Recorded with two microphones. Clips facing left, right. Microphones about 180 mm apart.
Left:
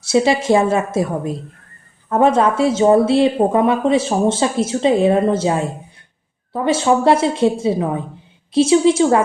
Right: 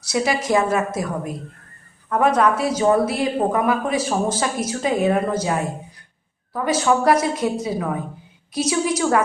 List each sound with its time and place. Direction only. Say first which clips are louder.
0.0 s speech: left 6 dB; 25° left (ahead or behind)